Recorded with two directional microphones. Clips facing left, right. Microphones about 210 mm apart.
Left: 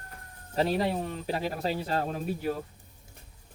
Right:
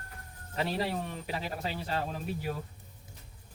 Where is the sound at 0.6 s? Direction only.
35° left (ahead or behind).